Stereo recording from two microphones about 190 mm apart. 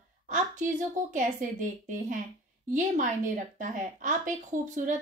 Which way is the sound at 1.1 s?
40° right (ahead or behind).